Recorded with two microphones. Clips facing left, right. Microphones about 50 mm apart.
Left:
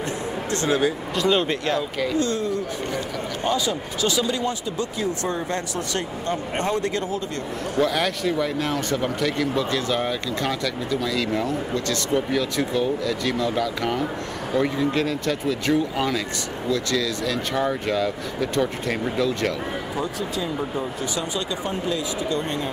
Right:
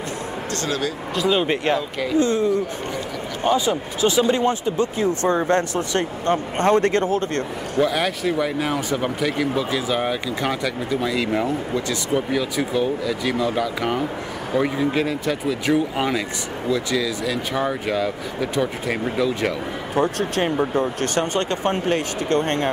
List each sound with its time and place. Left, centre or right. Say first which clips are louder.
0.5 s speech: left 4 dB; left
1.1 s speech: right 2 dB; centre
1.4 s speech: right 3 dB; right
1.8 s speech: even; centre
2.1 s speech: right 7 dB; right
7.8 s speech: right 2 dB; centre
20.0 s speech: right 9 dB; right